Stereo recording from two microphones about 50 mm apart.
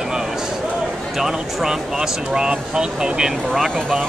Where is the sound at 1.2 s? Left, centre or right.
Centre.